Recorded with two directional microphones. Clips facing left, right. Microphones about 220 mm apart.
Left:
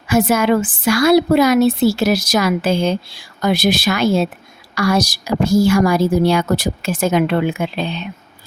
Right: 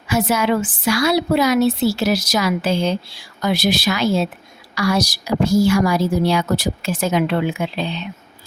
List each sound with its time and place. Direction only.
0.1 s a woman's voice: 50° left (ahead or behind)